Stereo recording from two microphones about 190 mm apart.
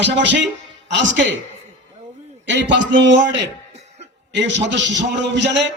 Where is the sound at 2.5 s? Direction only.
70° right (ahead or behind).